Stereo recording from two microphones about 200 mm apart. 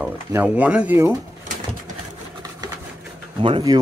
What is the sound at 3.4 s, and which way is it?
Speech, 25° right (ahead or behind).